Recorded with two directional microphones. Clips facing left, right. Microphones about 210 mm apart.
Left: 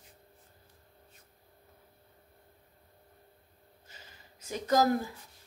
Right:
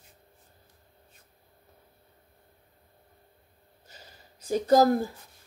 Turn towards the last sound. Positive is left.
turn(degrees=-35)  # may be behind; listen again after turning